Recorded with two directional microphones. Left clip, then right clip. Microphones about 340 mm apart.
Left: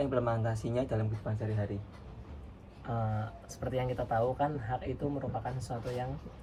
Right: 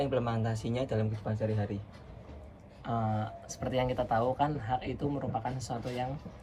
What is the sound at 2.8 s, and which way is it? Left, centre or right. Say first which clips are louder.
Speech: right 4 dB; centre.